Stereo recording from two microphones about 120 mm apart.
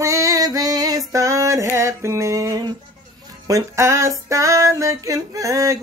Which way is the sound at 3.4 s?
25° right (ahead or behind).